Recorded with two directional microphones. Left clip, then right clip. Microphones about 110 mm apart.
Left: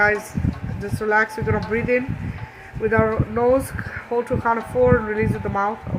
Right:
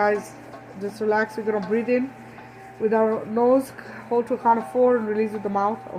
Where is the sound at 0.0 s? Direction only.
20° left (ahead or behind).